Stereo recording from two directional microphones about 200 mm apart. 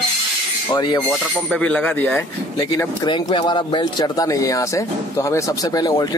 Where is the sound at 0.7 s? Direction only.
20° left (ahead or behind).